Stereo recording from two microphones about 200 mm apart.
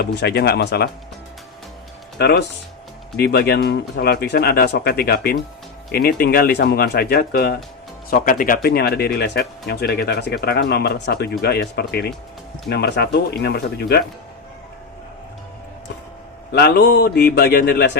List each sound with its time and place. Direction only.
0.0 s speech: 55° left (ahead or behind)
2.1 s speech: 55° left (ahead or behind)
16.5 s speech: 55° left (ahead or behind)